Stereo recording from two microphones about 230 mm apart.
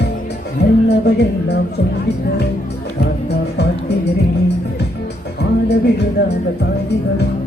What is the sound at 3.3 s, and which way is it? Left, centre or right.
Music, left.